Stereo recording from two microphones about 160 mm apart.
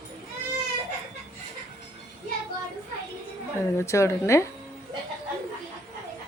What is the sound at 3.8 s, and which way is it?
Speech, 20° left (ahead or behind).